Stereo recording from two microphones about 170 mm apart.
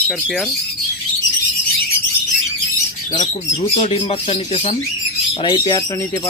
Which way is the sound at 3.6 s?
40° left (ahead or behind).